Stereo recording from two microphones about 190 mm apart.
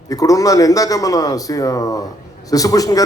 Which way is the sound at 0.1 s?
20° left (ahead or behind).